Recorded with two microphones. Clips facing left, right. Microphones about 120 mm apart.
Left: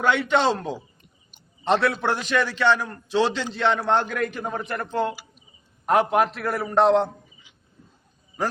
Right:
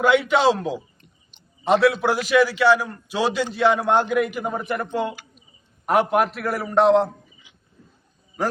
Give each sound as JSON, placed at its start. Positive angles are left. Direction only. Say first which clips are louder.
{"t": 0.0, "sound": "a man's voice", "louder": "right 3 dB", "side_deg": -5}